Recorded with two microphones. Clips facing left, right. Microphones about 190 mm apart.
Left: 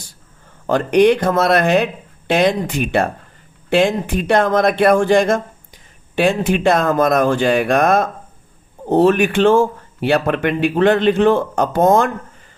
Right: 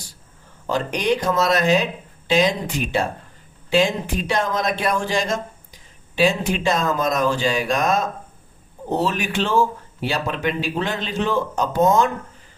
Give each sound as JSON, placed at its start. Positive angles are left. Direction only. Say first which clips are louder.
{"t": 0.7, "sound": "speech", "louder": "left 9 dB", "side_deg": 60}